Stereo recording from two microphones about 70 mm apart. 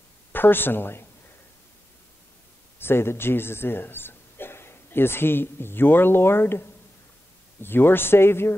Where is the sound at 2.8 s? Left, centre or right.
Left.